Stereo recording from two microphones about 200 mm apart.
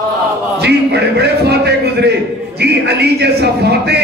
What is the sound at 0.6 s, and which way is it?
A man's voice, 55° right (ahead or behind).